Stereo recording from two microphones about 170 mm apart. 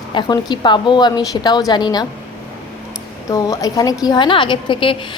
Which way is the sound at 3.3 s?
20° left (ahead or behind).